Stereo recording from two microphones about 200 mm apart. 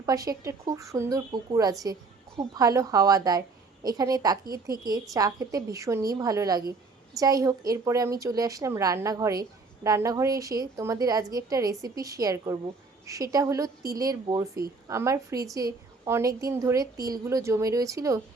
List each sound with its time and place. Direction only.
0.0 s a woman's voice: 15° right (ahead or behind)